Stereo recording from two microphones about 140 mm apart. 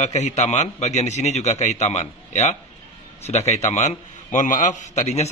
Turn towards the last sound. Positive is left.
turn(degrees=55)  # may be behind; listen again after turning